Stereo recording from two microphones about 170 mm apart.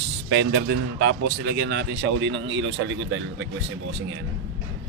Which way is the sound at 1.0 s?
85° right.